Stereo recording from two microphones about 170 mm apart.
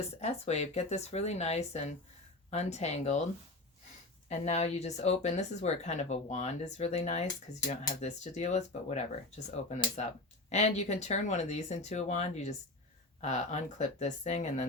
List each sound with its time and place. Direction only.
0.2 s speech: 40° left (ahead or behind)
4.3 s speech: 40° left (ahead or behind)